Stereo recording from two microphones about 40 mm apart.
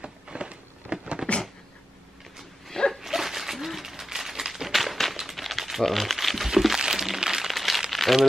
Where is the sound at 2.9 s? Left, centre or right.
Centre.